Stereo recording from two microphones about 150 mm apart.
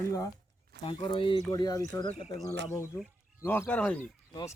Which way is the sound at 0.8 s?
35° left (ahead or behind).